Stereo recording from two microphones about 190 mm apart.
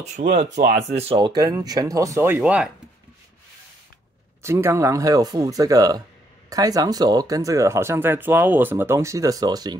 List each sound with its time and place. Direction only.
0.2 s speech: 40° right (ahead or behind)
0.9 s speech: 30° right (ahead or behind); by 2.7 s 5° right (ahead or behind)
4.4 s speech: 15° right (ahead or behind)